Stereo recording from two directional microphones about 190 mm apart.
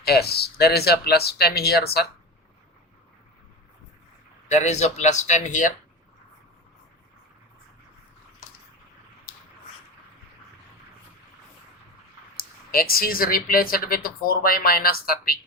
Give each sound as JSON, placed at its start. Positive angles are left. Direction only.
{"t": 0.0, "sound": "speech", "side_deg": 55}
{"t": 4.4, "sound": "speech", "side_deg": 35}
{"t": 12.4, "sound": "speech", "side_deg": 50}